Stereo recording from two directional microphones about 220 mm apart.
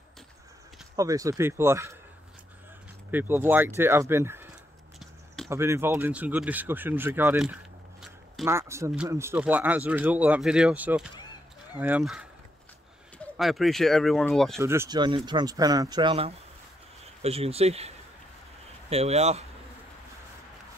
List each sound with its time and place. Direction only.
0.9 s speech: 15° right (ahead or behind)
3.1 s speech: 10° right (ahead or behind)
4.9 s a sound: centre (ahead or behind)
5.5 s speech: 10° right (ahead or behind)
13.4 s speech: centre (ahead or behind)
14.6 s speech: 10° right (ahead or behind); by 19.4 s 30° right (ahead or behind)